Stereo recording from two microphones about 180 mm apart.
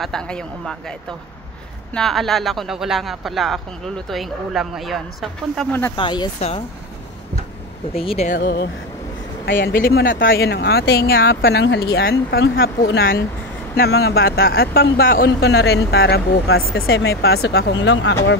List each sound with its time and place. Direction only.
0.0 s speech: 5° left (ahead or behind)
2.0 s speech: centre (ahead or behind)
5.7 s speech: 10° left (ahead or behind)
5.9 s speech: 25° left (ahead or behind)
7.9 s speech: 30° left (ahead or behind)
8.3 s speech: 60° left (ahead or behind)
9.8 s speech: 55° left (ahead or behind)
11.4 s speech: 75° left (ahead or behind)